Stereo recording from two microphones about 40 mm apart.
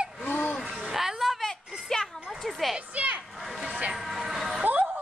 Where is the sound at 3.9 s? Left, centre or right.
Centre.